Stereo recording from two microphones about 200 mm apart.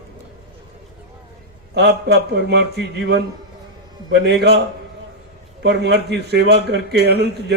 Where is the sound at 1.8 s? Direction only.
55° right (ahead or behind).